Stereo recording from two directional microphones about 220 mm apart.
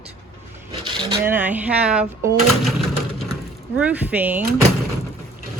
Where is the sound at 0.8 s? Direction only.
20° right (ahead or behind).